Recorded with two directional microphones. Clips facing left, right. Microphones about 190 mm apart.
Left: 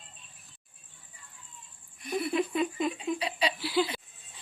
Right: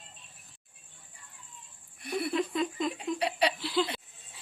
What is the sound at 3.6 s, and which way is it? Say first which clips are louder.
Speech: left 1 dB; 5° left (ahead or behind).